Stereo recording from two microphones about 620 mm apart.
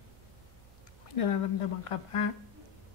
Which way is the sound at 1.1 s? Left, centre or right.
Left.